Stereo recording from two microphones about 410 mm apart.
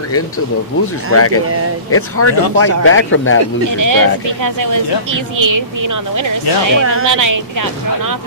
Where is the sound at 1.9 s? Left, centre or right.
Left.